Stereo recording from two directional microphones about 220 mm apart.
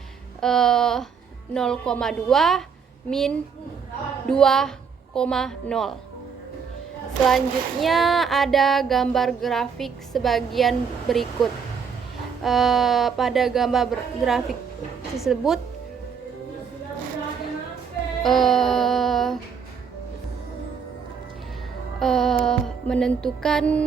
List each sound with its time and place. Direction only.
0.4 s female singing: centre (ahead or behind)
7.3 s female singing: centre (ahead or behind)
12.4 s female singing: centre (ahead or behind)
18.2 s music: centre (ahead or behind)
21.9 s music: centre (ahead or behind)